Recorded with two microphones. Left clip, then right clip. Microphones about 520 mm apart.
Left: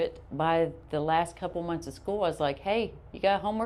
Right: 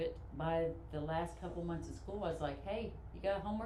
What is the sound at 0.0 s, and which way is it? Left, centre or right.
A woman's voice, left.